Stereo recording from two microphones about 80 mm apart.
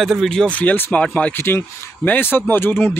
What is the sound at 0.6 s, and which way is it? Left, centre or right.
Speech, centre.